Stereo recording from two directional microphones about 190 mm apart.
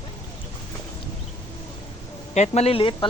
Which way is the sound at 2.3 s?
35° left (ahead or behind).